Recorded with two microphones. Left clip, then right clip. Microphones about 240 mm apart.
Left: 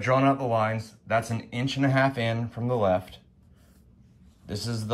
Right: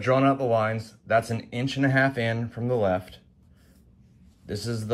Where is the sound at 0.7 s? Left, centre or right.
Centre.